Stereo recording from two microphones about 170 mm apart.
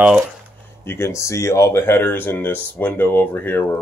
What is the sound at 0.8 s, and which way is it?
Speech, 15° left (ahead or behind).